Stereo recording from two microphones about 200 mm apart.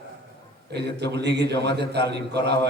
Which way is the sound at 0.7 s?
55° right (ahead or behind).